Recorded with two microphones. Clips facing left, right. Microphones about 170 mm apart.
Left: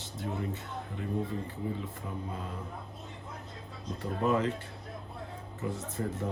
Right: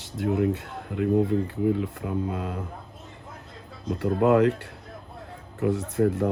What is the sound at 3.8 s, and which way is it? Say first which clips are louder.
Speech: right 9 dB; 85° right.